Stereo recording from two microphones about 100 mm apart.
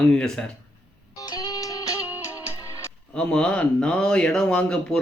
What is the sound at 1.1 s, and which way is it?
Music, 45° left (ahead or behind).